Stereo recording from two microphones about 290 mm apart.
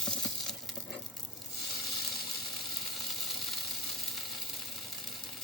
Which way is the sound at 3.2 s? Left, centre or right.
Centre.